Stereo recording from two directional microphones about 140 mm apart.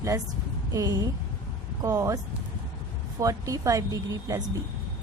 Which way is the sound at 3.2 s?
25° right (ahead or behind).